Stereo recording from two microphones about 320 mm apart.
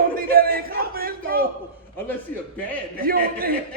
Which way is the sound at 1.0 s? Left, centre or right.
Right.